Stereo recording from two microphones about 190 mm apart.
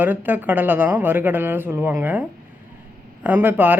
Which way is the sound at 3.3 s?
10° right (ahead or behind).